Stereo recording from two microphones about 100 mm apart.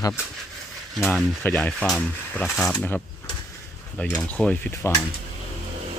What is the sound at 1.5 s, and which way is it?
Speech, 10° left (ahead or behind).